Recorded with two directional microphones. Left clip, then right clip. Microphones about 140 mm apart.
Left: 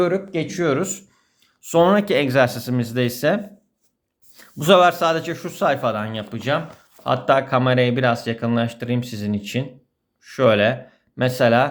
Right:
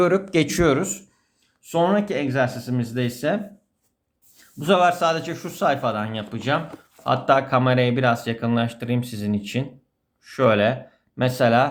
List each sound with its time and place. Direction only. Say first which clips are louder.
0.3 s speech: right 4 dB; 35° right (ahead or behind)
0.8 s speech: left 1 dB; 20° left (ahead or behind)
1.4 s speech: left 5 dB; 45° left (ahead or behind); by 3.4 s 25° left (ahead or behind)
4.4 s speech: left 5 dB; 45° left (ahead or behind); by 6.2 s 15° left (ahead or behind)
6.3 s speech: left 1 dB; 5° left (ahead or behind)